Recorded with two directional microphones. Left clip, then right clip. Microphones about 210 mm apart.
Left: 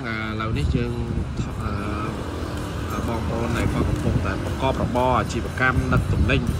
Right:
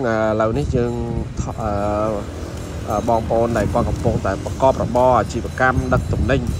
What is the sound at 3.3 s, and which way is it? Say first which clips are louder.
Speech: right 8 dB; centre (ahead or behind).